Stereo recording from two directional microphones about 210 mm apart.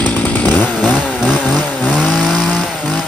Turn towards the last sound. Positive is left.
turn(degrees=0)  # may be behind; listen again after turning